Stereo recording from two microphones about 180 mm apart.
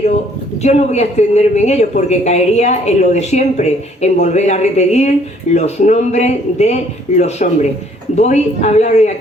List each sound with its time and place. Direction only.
0.6 s speech: 40° left (ahead or behind)